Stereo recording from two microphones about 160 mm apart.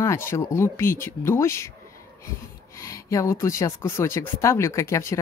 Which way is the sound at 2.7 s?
20° left (ahead or behind).